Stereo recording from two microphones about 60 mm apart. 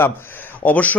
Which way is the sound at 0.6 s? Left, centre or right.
Left.